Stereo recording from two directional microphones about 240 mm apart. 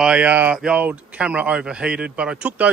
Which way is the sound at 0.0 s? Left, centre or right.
Centre.